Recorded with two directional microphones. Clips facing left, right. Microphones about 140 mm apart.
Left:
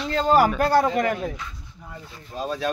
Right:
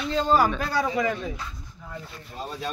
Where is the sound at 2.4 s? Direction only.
90° left.